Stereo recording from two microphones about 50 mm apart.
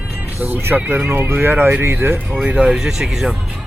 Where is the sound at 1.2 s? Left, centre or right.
Right.